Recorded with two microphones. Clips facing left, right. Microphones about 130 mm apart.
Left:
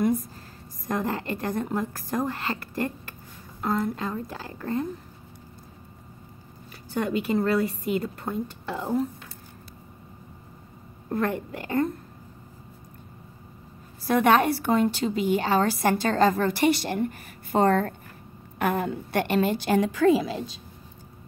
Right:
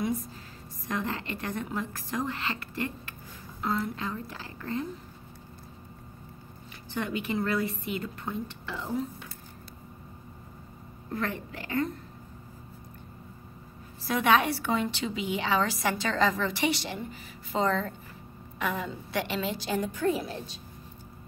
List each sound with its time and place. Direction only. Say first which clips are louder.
0.8 s a woman's voice: left 5 dB; 45° left (ahead or behind)
6.9 s a woman's voice: left 6 dB; 40° left (ahead or behind)
11.1 s a woman's voice: left 6 dB; 40° left (ahead or behind)
14.0 s a woman's voice: left 4 dB; 50° left (ahead or behind); by 20.4 s 90° left